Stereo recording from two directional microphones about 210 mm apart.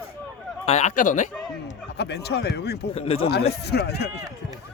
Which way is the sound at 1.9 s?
50° left (ahead or behind).